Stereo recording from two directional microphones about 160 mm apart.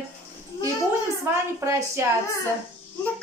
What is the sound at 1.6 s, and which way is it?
Speech, 15° right (ahead or behind).